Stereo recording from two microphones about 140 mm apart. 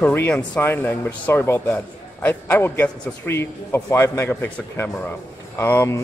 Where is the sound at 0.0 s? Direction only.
15° left (ahead or behind).